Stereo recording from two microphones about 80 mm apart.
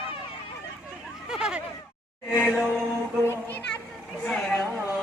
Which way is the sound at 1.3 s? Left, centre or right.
Centre.